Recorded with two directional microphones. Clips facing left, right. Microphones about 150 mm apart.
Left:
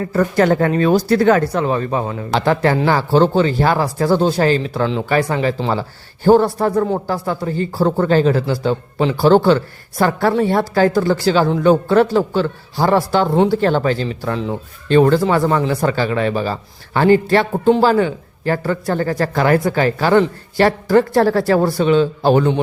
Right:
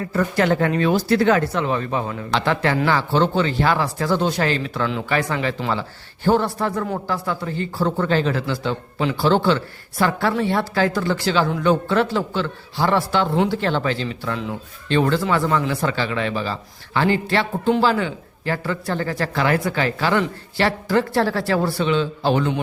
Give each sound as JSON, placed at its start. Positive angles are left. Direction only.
{"t": 0.1, "sound": "speech", "side_deg": 40}